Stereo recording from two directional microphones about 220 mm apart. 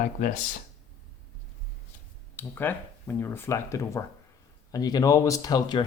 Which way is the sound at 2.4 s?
10° left (ahead or behind).